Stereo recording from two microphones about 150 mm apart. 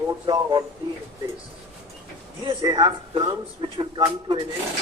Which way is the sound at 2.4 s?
30° right (ahead or behind).